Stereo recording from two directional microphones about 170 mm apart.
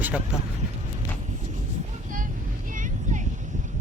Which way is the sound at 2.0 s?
50° right (ahead or behind).